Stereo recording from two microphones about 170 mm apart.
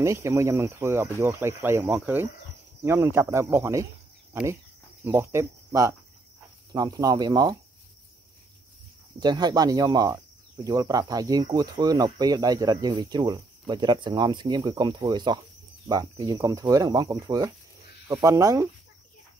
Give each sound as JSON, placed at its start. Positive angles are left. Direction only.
{"t": 0.0, "sound": "speech", "side_deg": -15}
{"t": 9.2, "sound": "speech", "side_deg": -25}